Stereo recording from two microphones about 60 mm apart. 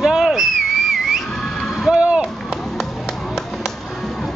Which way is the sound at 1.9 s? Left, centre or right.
Centre.